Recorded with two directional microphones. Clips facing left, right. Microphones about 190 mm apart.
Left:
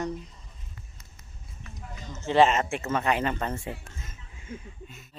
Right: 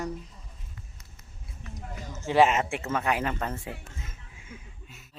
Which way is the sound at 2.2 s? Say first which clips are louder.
Left 1 dB; 10° right (ahead or behind).